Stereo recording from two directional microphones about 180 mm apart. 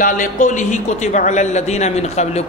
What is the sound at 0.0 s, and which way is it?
A man's voice, 45° left (ahead or behind).